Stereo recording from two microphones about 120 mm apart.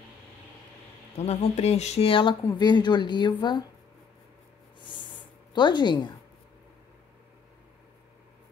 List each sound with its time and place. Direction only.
1.1 s speech: 65° left (ahead or behind); by 3.6 s 40° left (ahead or behind)
5.5 s speech: 40° left (ahead or behind)